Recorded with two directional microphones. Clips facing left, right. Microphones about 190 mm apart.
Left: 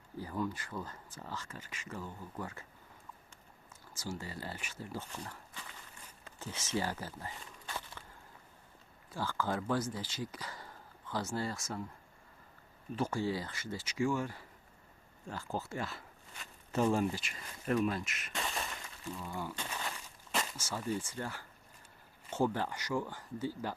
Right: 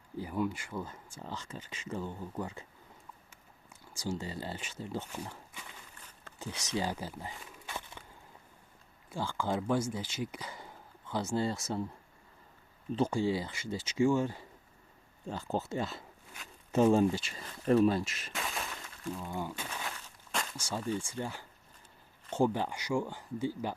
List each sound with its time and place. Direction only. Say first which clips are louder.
0.2 s speech: right 3 dB; 15° right (ahead or behind)
3.9 s speech: right 5 dB; 15° right (ahead or behind)
5.1 s speech: right 3 dB; 10° right (ahead or behind)
7.7 s walk: right 1 dB; 15° right (ahead or behind)
9.1 s speech: right 2 dB; 15° right (ahead or behind)
11.5 s speech: right 5 dB; 35° right (ahead or behind)
12.9 s speech: right 4 dB; 20° right (ahead or behind)
18.3 s breaking: even; centre (ahead or behind)
19.3 s speech: right 3 dB; 20° right (ahead or behind)
19.9 s a sound: left 1 dB; 5° left (ahead or behind)
20.6 s speech: right 2 dB; 15° right (ahead or behind)